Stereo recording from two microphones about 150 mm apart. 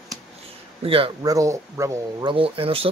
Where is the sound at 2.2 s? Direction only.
35° right (ahead or behind).